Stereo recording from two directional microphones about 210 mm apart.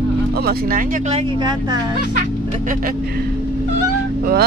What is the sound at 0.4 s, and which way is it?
Speech, 45° right (ahead or behind).